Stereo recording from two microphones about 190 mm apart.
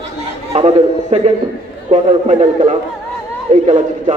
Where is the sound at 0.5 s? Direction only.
35° right (ahead or behind).